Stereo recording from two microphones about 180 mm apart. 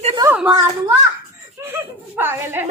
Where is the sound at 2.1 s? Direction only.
10° right (ahead or behind).